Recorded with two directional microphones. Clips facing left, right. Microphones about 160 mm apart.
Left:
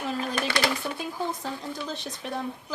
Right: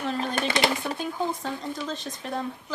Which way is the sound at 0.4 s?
20° right (ahead or behind).